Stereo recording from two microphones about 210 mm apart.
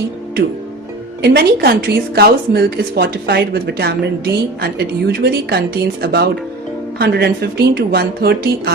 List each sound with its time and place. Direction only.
1.2 s a woman's voice: 50° right (ahead or behind)